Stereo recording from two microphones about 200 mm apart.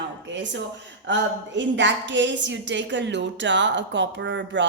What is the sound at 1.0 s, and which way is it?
A woman's voice, 65° right (ahead or behind).